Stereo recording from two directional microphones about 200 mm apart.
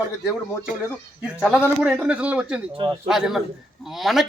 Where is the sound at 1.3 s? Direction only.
5° right (ahead or behind).